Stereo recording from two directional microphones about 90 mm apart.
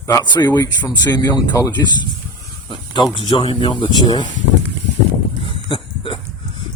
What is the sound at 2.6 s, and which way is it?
Snake, 55° left (ahead or behind).